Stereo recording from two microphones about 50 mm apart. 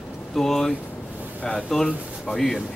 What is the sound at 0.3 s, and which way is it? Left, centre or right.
A man's voice, centre.